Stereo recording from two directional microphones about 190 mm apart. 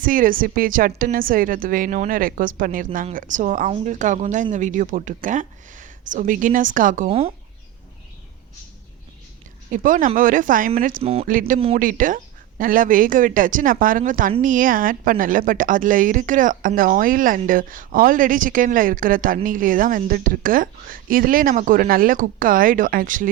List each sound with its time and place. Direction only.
0.0 s a woman's voice: 45° right (ahead or behind)
7.1 s speech: 30° right (ahead or behind)
9.7 s a woman's voice: 45° right (ahead or behind)
11.0 s speech: 30° right (ahead or behind)
11.3 s a woman's voice: 45° right (ahead or behind)